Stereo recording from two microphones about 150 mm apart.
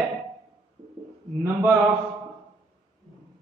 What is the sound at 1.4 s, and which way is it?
Speech, 15° right (ahead or behind).